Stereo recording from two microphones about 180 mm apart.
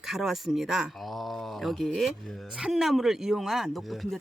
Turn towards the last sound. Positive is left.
turn(degrees=0)  # may be behind; listen again after turning